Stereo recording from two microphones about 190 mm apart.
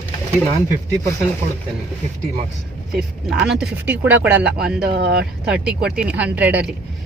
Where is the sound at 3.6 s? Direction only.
10° right (ahead or behind).